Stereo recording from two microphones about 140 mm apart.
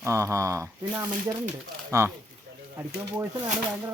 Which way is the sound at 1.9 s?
20° right (ahead or behind).